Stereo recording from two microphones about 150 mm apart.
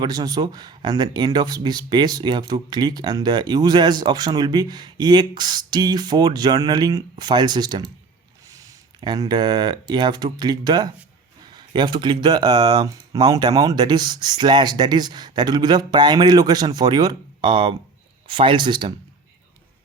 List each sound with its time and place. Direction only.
0.0 s speech: 25° right (ahead or behind)